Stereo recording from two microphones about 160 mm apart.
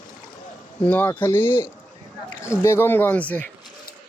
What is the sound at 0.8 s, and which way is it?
Speech, 10° left (ahead or behind).